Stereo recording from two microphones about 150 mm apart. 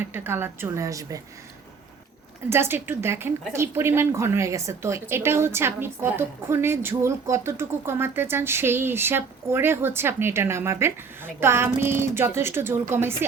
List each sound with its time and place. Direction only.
0.0 s a woman's voice: 15° right (ahead or behind)
2.5 s a woman's voice: 15° right (ahead or behind)